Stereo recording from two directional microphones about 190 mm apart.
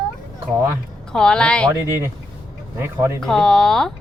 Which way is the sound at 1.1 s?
5° left (ahead or behind).